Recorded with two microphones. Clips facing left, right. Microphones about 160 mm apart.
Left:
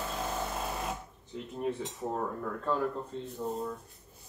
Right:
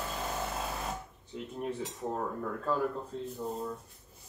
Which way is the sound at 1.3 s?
Centre (ahead or behind).